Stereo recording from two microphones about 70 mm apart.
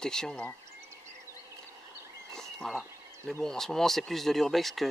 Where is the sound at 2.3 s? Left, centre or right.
Centre.